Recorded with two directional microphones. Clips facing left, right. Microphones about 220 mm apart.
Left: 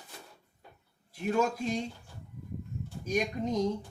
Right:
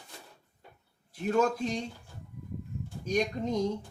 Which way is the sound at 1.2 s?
5° left (ahead or behind).